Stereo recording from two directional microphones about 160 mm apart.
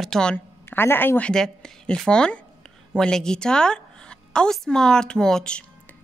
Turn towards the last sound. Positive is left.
turn(degrees=5)  # may be behind; listen again after turning